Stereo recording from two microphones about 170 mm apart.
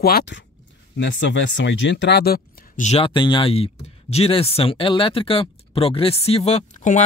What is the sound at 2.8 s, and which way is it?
Speech, 40° left (ahead or behind).